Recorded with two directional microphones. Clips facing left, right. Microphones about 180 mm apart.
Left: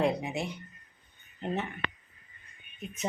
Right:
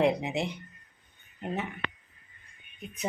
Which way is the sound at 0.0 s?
20° right (ahead or behind).